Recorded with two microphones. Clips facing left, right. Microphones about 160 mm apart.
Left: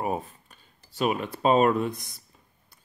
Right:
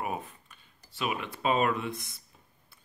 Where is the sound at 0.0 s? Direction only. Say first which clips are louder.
Left 5 dB; 35° left (ahead or behind).